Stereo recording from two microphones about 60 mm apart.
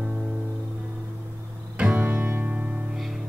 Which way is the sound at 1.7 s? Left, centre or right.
Right.